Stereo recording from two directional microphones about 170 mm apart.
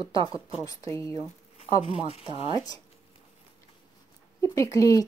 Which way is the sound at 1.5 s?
35° left (ahead or behind).